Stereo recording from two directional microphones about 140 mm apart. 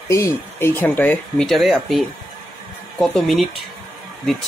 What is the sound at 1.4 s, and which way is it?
Speech, centre (ahead or behind).